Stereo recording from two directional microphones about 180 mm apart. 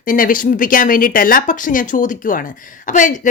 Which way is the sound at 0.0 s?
50° left (ahead or behind).